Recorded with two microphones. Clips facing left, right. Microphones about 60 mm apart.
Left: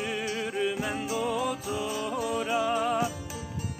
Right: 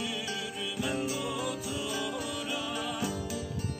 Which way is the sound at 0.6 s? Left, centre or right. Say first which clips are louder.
Left 3 dB; left.